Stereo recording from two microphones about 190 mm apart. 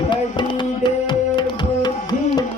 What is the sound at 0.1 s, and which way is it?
Tabla, 25° left (ahead or behind).